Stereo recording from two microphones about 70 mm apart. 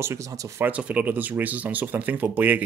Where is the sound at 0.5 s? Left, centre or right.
Right.